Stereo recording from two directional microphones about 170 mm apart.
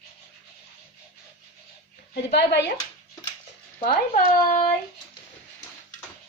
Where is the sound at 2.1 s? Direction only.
75° left (ahead or behind).